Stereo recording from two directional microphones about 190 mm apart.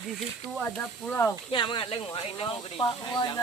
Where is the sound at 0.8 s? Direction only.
10° left (ahead or behind).